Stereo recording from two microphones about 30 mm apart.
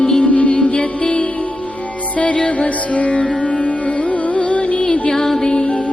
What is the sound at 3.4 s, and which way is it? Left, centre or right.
Music, left.